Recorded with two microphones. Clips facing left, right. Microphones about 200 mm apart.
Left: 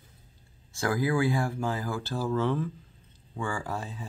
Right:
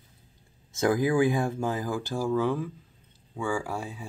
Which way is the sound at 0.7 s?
20° right (ahead or behind).